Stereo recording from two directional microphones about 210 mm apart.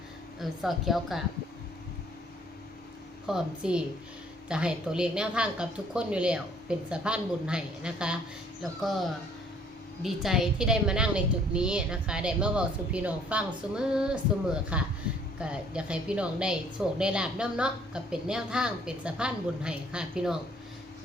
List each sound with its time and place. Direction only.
0.3 s a woman's voice: centre (ahead or behind)
3.2 s a woman's voice: 5° right (ahead or behind)